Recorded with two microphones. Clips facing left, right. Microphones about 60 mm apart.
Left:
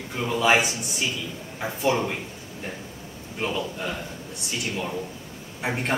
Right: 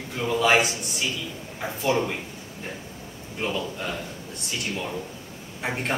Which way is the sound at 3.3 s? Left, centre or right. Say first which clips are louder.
Even; centre.